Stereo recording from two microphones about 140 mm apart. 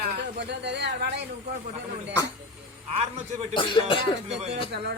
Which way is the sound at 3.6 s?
35° left (ahead or behind).